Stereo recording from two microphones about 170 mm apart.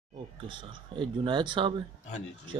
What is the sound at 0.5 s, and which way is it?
Speech, 30° right (ahead or behind).